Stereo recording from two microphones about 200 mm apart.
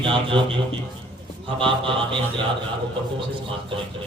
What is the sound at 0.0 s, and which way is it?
Speech, 25° right (ahead or behind).